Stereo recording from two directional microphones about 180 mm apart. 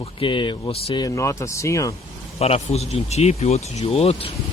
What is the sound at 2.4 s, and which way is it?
Speech, 35° left (ahead or behind).